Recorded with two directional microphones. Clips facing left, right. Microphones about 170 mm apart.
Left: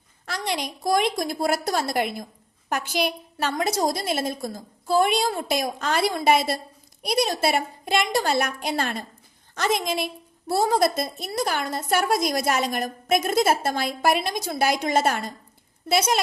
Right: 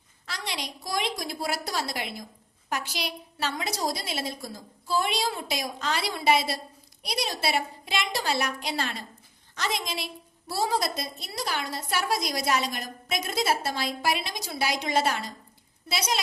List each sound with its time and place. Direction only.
0.3 s a woman's voice: 50° left (ahead or behind)